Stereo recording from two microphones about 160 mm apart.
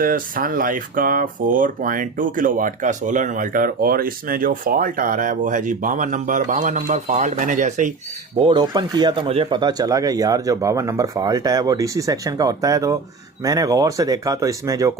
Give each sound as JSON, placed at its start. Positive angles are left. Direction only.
{"t": 0.0, "sound": "speech", "side_deg": -60}
{"t": 8.4, "sound": "speech", "side_deg": -25}